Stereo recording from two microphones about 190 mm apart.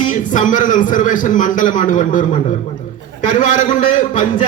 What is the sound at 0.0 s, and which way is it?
A man's voice, 40° left (ahead or behind).